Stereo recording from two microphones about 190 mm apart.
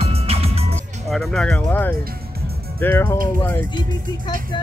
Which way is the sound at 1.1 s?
5° left (ahead or behind).